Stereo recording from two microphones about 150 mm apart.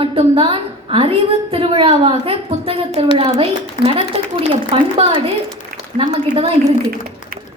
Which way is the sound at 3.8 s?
60° left (ahead or behind).